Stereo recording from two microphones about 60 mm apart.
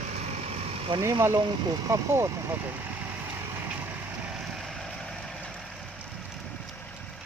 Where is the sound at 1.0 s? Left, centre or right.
Right.